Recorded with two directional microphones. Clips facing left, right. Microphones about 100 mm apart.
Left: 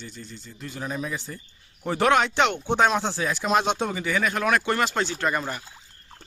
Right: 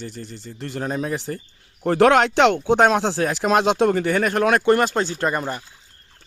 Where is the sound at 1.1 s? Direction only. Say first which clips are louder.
Right 7 dB; 70° right (ahead or behind).